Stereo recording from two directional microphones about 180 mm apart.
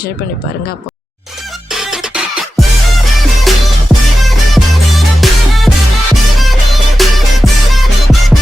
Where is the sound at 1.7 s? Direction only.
Centre (ahead or behind).